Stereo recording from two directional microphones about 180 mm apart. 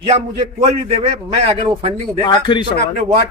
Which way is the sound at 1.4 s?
30° right (ahead or behind).